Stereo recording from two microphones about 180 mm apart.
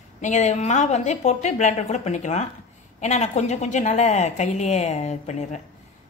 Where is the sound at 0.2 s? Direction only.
40° left (ahead or behind).